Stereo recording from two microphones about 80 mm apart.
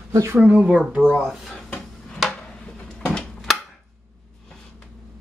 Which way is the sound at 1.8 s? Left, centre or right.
Centre.